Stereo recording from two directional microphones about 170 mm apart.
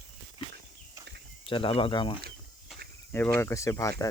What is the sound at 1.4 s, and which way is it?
Speech, 30° left (ahead or behind).